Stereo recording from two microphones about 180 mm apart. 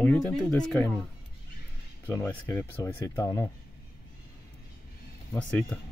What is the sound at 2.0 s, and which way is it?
Speech, 15° left (ahead or behind).